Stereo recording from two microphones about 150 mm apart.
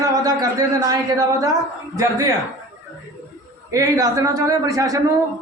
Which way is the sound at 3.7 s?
25° right (ahead or behind).